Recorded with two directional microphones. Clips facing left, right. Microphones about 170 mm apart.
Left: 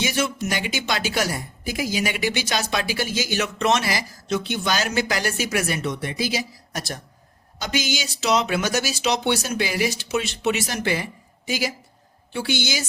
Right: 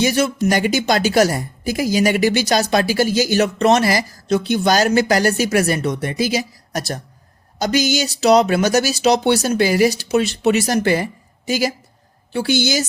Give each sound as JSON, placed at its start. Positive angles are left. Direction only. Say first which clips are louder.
{"t": 0.0, "sound": "a woman's voice", "louder": "right 7 dB", "side_deg": -40}